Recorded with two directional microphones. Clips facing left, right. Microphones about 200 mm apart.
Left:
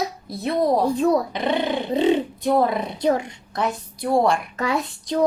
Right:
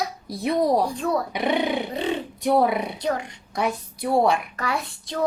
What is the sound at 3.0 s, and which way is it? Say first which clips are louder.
Speech: left 5 dB; 25° left (ahead or behind).